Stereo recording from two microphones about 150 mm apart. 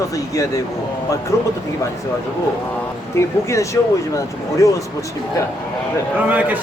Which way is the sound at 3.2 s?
20° left (ahead or behind).